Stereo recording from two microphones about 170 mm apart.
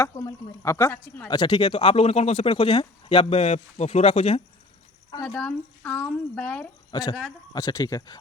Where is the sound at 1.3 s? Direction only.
25° left (ahead or behind).